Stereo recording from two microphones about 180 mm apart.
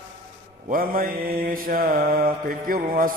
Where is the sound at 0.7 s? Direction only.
55° right (ahead or behind).